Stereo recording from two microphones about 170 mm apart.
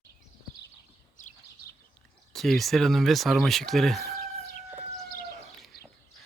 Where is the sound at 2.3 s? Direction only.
Centre (ahead or behind).